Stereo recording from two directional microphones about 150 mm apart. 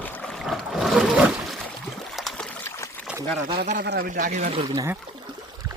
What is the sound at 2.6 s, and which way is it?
Trickle, 20° left (ahead or behind).